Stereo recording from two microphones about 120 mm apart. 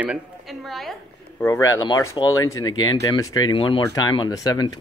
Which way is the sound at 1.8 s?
40° left (ahead or behind).